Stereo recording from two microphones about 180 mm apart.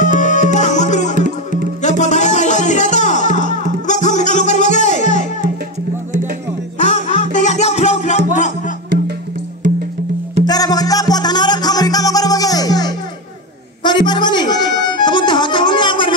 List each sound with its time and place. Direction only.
0.0 s music: 45° left (ahead or behind)
1.1 s music: 50° right (ahead or behind)
1.8 s music: 40° left (ahead or behind)
6.8 s music: 40° left (ahead or behind)
10.4 s music: 20° left (ahead or behind)